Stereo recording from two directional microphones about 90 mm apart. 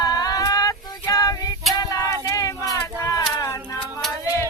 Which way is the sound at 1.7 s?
40° left (ahead or behind).